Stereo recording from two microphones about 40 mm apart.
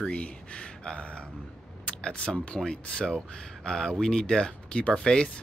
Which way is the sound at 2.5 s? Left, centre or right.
Left.